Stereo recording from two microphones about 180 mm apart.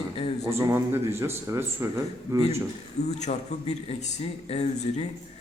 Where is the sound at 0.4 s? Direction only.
15° right (ahead or behind).